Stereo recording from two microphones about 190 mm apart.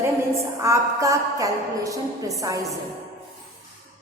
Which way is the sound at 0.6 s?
15° right (ahead or behind).